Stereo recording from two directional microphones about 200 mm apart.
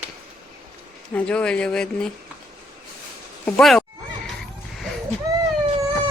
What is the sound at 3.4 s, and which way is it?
Speech, 5° left (ahead or behind).